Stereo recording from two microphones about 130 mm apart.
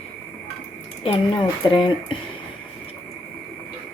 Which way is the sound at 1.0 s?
40° left (ahead or behind).